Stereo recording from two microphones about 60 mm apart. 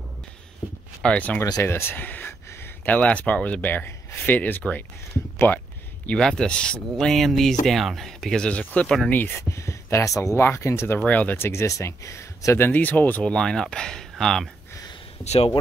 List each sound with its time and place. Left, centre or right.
1.1 s speech: left
1.6 s speech: left
5.5 s speech: left
6.1 s speech: centre
8.8 s speech: centre
9.1 s speech: left
9.4 s speech: left
10.6 s speech: left
11.1 s speech: left
11.3 s speech: left
12.5 s speech: left
13.2 s speech: centre